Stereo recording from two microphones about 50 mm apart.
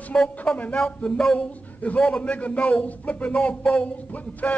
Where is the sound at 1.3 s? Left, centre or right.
Left.